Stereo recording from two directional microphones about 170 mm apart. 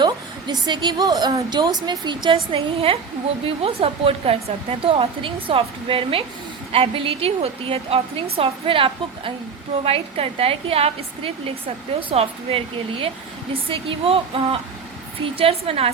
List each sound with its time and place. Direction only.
0.0 s a woman's voice: 25° right (ahead or behind)